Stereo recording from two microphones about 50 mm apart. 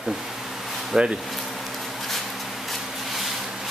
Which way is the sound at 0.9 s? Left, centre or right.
Centre.